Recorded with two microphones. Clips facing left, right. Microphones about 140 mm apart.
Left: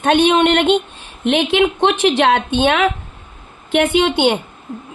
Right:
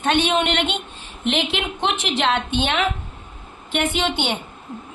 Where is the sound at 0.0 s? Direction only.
65° left (ahead or behind); by 0.8 s 45° left (ahead or behind).